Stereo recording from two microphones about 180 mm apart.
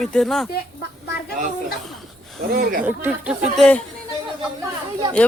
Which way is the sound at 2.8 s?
5° right (ahead or behind).